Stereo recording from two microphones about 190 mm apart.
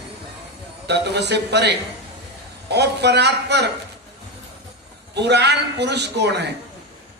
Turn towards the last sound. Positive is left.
turn(degrees=-60)  # may be behind; listen again after turning